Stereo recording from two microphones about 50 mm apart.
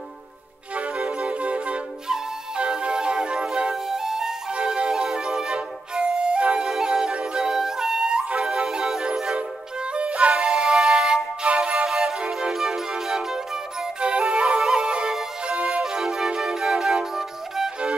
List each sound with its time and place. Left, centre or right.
0.7 s music: right; by 4.4 s centre
4.5 s flute: right
6.7 s music: centre
14.6 s music: centre
14.9 s music: centre
15.8 s music: centre